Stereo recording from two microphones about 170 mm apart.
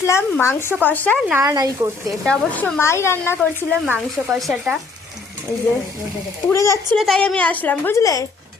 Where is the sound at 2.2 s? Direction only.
10° left (ahead or behind).